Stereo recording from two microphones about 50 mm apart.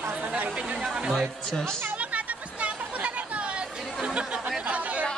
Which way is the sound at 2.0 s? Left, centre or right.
Right.